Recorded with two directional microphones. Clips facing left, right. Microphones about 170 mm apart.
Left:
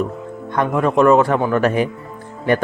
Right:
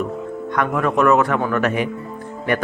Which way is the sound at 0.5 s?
30° left (ahead or behind).